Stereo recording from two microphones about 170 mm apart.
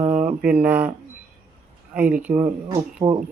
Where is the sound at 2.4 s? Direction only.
20° right (ahead or behind).